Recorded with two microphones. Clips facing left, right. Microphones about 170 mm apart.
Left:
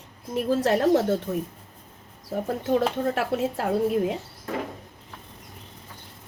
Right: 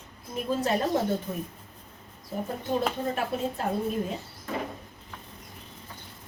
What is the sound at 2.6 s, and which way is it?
Speech, 85° left.